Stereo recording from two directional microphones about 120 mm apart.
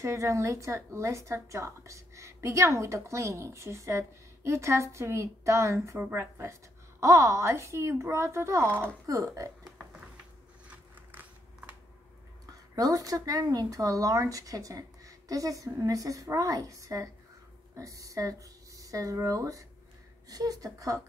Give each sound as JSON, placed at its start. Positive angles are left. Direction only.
{"t": 0.0, "sound": "speech", "side_deg": -25}
{"t": 11.1, "sound": "a sound", "side_deg": -15}
{"t": 12.7, "sound": "speech", "side_deg": -30}